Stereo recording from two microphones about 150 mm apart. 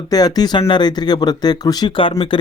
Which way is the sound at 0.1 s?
25° left (ahead or behind).